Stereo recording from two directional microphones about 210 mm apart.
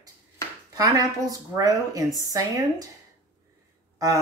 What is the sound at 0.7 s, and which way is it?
A woman's voice, 15° right (ahead or behind).